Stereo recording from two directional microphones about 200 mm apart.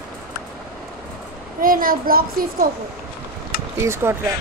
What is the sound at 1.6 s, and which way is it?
A child's voice, 45° right (ahead or behind).